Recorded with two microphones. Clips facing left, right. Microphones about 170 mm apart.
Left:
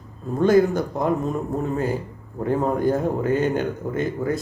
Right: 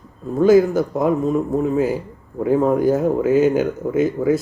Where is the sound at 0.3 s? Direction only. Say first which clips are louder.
Right 4 dB; 5° right (ahead or behind).